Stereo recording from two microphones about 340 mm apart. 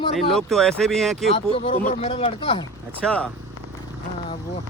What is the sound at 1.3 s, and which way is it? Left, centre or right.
Speech, centre.